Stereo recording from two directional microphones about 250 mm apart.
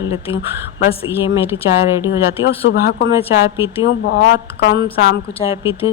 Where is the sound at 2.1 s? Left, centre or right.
Left.